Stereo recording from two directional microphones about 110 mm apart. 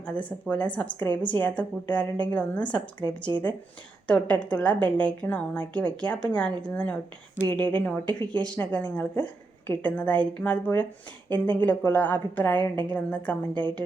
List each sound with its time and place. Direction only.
0.0 s a woman's voice: 10° left (ahead or behind)